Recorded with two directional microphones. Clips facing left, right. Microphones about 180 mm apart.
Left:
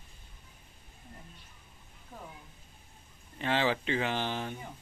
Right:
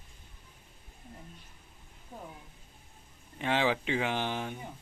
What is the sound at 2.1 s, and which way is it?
Speech, 20° right (ahead or behind).